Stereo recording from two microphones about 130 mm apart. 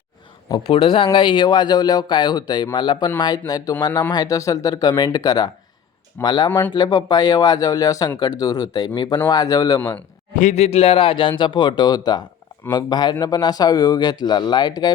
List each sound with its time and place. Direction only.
0.7 s a man's voice: 45° left (ahead or behind)
6.5 s speech: 15° left (ahead or behind)
6.7 s a man's voice: 30° left (ahead or behind)
10.3 s a man's voice: 65° left (ahead or behind); by 14.9 s 30° left (ahead or behind)